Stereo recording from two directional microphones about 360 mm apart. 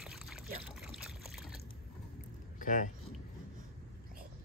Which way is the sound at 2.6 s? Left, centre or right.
Left.